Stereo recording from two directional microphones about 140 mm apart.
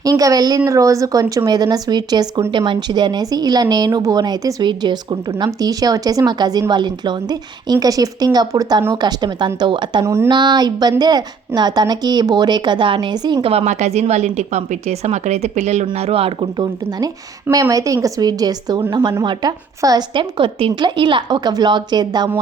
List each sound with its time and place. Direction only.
0.0 s a woman's voice: 25° right (ahead or behind)
13.5 s a woman's voice: 50° right (ahead or behind)
17.5 s a woman's voice: 25° right (ahead or behind)